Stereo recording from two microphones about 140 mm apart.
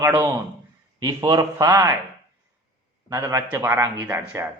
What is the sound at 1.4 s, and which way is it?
Speech, 25° right (ahead or behind).